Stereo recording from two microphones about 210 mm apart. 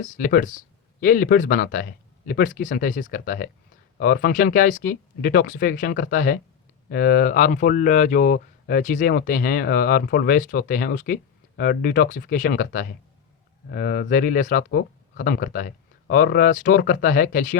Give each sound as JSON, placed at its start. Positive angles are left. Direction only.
{"t": 0.0, "sound": "speech", "side_deg": 40}